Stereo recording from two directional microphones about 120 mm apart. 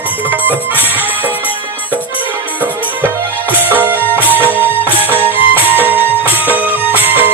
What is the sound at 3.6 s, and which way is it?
Music, 15° right (ahead or behind).